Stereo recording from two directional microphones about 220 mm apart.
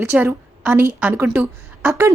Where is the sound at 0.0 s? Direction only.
10° right (ahead or behind).